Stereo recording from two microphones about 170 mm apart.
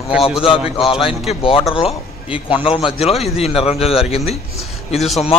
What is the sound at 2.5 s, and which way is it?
A man's voice, 30° left (ahead or behind).